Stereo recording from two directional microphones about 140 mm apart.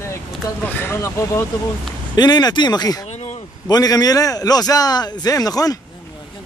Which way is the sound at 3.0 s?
50° left (ahead or behind).